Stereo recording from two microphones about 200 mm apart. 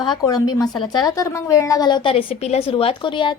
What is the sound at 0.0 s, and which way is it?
A woman's voice, 20° left (ahead or behind).